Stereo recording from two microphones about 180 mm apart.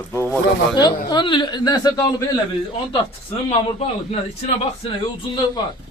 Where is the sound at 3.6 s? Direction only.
30° left (ahead or behind).